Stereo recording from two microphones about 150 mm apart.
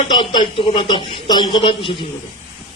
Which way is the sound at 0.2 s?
35° left (ahead or behind).